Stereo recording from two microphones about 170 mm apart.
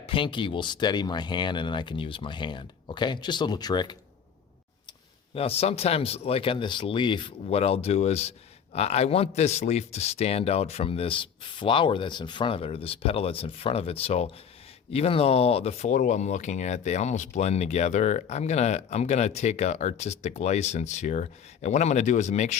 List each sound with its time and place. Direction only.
0.0 s speech: 30° left (ahead or behind)
5.3 s speech: 35° left (ahead or behind)